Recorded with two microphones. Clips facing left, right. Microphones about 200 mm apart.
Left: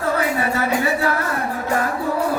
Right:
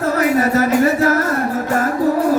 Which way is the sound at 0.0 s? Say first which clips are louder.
Right 5 dB; 40° right (ahead or behind).